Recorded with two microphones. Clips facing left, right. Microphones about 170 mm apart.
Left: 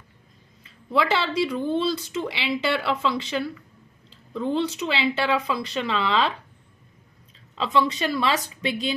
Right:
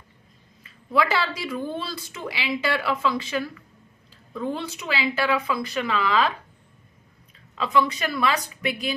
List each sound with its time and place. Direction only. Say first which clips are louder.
0.9 s a woman's voice: left 1 dB; 25° left (ahead or behind)
7.5 s a woman's voice: even; 25° left (ahead or behind)